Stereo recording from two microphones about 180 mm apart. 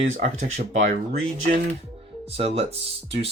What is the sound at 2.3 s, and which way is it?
Speech, 35° right (ahead or behind).